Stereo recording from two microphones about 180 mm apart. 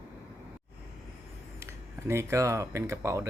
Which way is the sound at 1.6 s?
15° right (ahead or behind).